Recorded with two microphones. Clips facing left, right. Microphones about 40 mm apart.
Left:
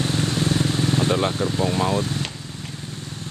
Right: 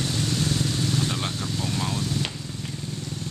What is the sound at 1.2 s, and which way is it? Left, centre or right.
Speech, left.